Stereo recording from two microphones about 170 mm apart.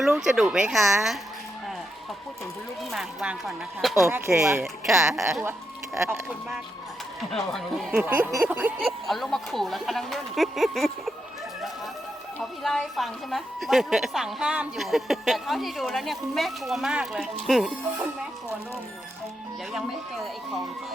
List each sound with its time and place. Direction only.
0.2 s a woman's voice: 5° right (ahead or behind)
2.9 s a woman's voice: centre (ahead or behind)
4.0 s speech: 15° right (ahead or behind)
4.6 s a woman's voice: centre (ahead or behind)
5.4 s speech: 15° right (ahead or behind)
7.3 s a woman's voice: centre (ahead or behind)
9.0 s a woman's voice: centre (ahead or behind)
12.4 s a woman's voice: centre (ahead or behind)
19.7 s a woman's voice: centre (ahead or behind)